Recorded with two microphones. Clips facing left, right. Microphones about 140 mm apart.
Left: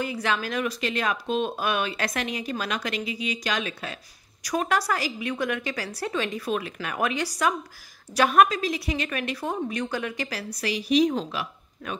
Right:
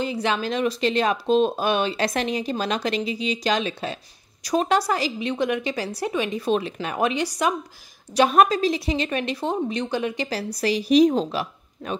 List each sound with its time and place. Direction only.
0.0 s speech: 25° right (ahead or behind)